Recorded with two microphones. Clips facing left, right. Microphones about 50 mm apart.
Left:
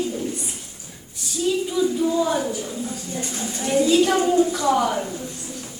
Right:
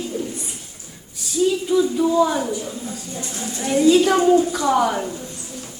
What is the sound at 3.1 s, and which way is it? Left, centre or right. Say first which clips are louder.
Speech: left 1 dB; left.